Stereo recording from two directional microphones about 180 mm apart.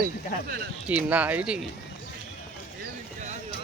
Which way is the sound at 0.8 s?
10° right (ahead or behind).